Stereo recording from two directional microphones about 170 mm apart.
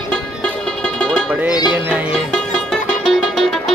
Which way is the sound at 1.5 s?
25° left (ahead or behind).